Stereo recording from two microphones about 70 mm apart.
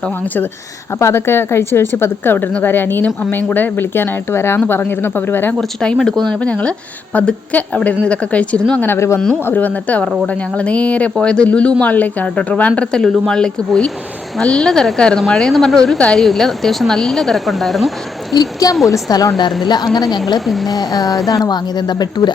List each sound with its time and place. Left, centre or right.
0.9 s a woman's voice: left
5.5 s speech: centre
6.4 s a woman's voice: centre
9.0 s speech: left
9.5 s a woman's voice: left; by 18.3 s centre
18.3 s a sound: left
19.6 s a woman's voice: left
20.7 s a sound: left
21.2 s speech: left